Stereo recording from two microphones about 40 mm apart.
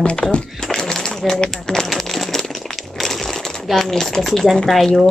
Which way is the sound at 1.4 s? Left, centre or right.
Centre.